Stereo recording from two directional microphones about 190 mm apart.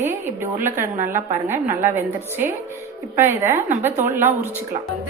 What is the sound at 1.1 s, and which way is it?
A woman's voice, 15° right (ahead or behind).